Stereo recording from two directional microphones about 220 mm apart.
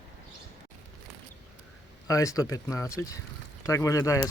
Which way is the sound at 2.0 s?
15° left (ahead or behind).